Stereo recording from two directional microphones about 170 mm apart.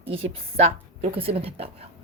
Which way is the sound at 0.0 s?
35° right (ahead or behind).